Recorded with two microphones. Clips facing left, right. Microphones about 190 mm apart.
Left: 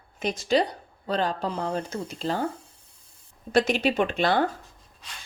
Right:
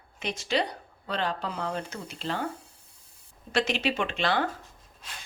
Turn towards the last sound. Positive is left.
turn(degrees=45)  # may be behind; listen again after turning